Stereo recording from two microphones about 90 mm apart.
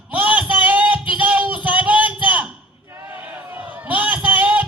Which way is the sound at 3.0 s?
30° right (ahead or behind).